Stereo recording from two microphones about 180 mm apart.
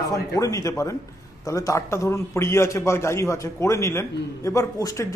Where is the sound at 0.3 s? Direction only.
20° left (ahead or behind).